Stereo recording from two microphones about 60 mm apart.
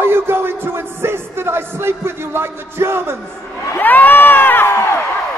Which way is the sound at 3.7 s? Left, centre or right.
Left.